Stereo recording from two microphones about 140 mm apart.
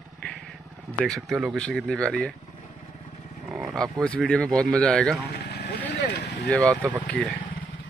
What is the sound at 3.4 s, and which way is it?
Roaring cats, 5° right (ahead or behind).